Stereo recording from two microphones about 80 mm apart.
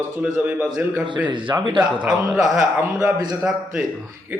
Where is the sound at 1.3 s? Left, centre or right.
Right.